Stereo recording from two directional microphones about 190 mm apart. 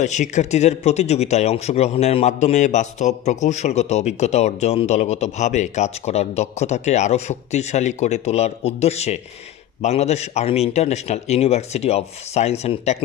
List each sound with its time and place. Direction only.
0.0 s a man's voice: 40° left (ahead or behind)